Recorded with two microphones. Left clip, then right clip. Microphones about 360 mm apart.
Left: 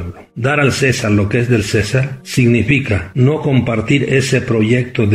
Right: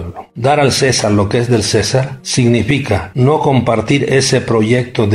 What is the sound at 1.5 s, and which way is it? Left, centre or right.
Speech, right.